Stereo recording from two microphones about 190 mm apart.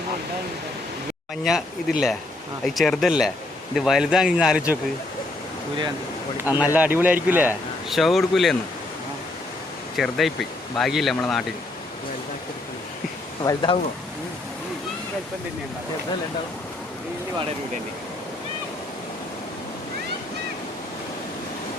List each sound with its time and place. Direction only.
1.5 s speech: centre (ahead or behind)
6.7 s a man's voice: 10° right (ahead or behind)
10.0 s speech: centre (ahead or behind)
13.4 s speech: 20° left (ahead or behind)